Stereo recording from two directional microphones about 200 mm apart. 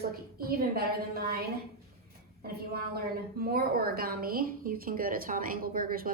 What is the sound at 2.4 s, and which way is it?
A woman's voice, 50° right (ahead or behind).